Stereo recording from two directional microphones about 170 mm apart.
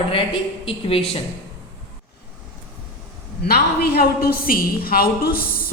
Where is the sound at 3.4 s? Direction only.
65° left (ahead or behind).